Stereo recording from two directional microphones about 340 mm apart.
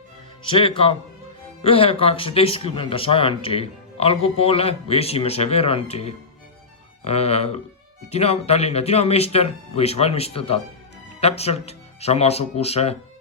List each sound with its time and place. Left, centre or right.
0.4 s speech: centre